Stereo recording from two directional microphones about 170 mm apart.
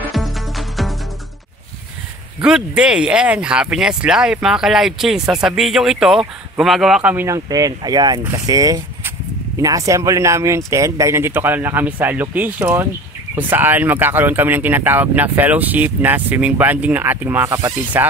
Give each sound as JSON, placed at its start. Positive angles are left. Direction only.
{"t": 0.1, "sound": "music", "side_deg": 0}
{"t": 2.4, "sound": "speech", "side_deg": -5}